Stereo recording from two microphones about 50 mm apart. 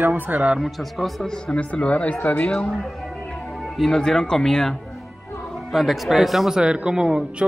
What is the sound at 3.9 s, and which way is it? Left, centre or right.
Speech, centre.